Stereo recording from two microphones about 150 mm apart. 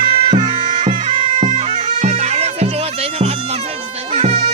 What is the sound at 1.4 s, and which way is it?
Bagpipes, 50° right (ahead or behind).